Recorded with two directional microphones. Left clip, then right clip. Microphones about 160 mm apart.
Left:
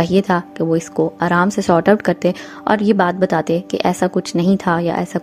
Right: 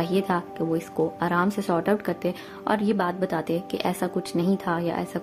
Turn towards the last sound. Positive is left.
turn(degrees=45)  # may be behind; listen again after turning